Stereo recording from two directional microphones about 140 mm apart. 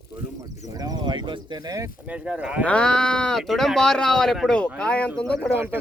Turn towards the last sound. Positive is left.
turn(degrees=-15)  # may be behind; listen again after turning